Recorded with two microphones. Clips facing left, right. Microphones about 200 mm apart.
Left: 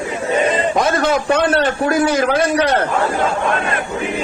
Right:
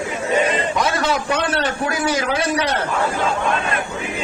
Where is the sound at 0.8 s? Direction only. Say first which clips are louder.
Left 4 dB; 50° left (ahead or behind).